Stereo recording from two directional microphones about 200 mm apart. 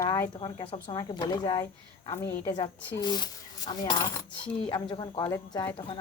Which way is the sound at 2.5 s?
20° left (ahead or behind).